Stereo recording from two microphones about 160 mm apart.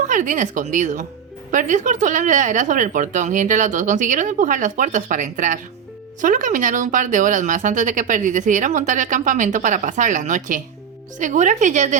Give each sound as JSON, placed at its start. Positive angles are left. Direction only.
{"t": 0.1, "sound": "speech", "side_deg": -55}